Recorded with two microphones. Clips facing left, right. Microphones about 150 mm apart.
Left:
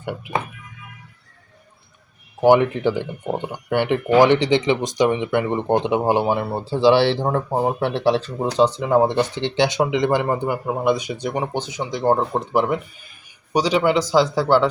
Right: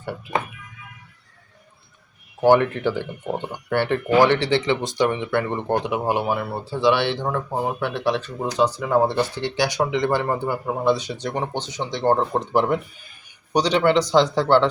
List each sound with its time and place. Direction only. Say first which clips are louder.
2.4 s speech: left 2 dB; 15° left (ahead or behind)